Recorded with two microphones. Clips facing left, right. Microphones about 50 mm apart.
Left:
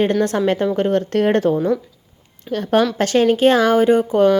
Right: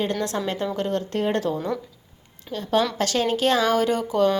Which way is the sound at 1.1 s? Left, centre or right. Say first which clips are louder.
Left 7 dB; left.